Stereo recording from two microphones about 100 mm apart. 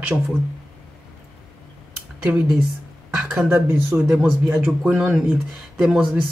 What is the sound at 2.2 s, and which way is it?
Speech, 10° right (ahead or behind).